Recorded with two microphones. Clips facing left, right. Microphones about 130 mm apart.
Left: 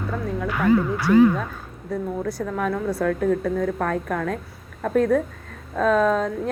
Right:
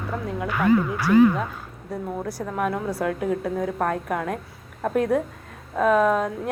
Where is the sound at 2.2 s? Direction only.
10° right (ahead or behind).